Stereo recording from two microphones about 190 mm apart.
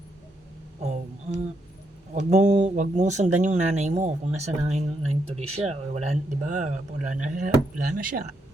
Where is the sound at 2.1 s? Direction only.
40° right (ahead or behind).